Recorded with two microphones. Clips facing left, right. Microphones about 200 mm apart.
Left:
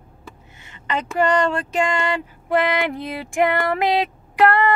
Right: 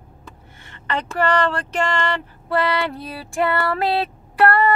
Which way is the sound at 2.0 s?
15° left (ahead or behind).